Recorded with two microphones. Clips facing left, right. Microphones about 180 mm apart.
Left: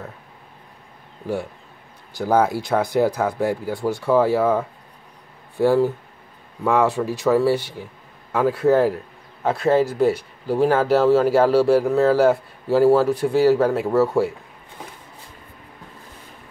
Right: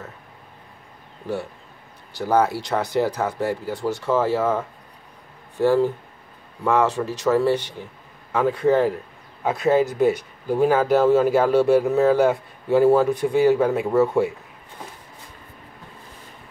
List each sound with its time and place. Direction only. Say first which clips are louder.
1.2 s speech: left 2 dB; 15° left (ahead or behind)
9.4 s a man's voice: left 1 dB; 15° right (ahead or behind)
11.1 s speech: left 1 dB; centre (ahead or behind)